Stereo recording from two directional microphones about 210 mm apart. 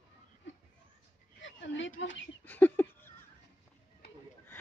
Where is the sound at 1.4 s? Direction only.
60° left (ahead or behind).